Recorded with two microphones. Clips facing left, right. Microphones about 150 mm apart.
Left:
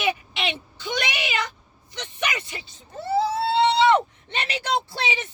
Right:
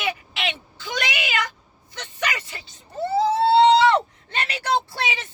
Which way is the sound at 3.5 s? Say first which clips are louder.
Right 7 dB; 35° right (ahead or behind).